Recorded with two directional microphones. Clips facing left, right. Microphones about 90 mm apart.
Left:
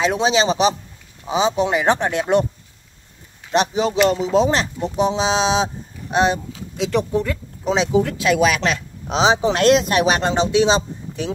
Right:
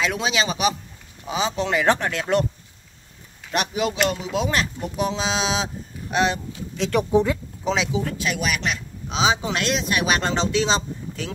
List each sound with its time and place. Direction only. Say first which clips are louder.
0.0 s speech: left 6 dB; 25° left (ahead or behind)
3.5 s speech: left 6 dB; 25° left (ahead or behind)
6.8 s speech: left 2 dB; centre (ahead or behind)
7.1 s speech: right 2 dB; 20° right (ahead or behind)
7.9 s speech: left 8 dB; 65° left (ahead or behind); by 8.8 s 90° left
9.0 s speech: left 5 dB; 35° left (ahead or behind)
10.0 s a man's voice: left 4 dB; 20° left (ahead or behind)